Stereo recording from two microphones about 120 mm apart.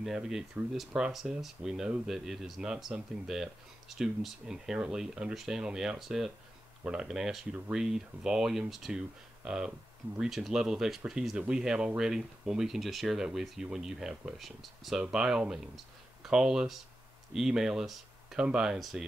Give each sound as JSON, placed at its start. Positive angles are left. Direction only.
{"t": 0.0, "sound": "speech", "side_deg": -5}